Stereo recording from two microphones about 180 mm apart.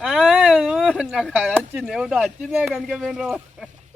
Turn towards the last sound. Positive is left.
turn(degrees=0)  # may be behind; listen again after turning